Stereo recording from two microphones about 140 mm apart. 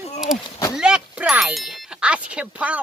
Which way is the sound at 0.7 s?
5° right (ahead or behind).